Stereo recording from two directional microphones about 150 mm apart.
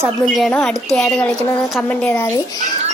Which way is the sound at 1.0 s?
5° left (ahead or behind).